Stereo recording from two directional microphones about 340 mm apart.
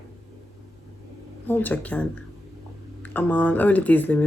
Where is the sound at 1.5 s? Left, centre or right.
Centre.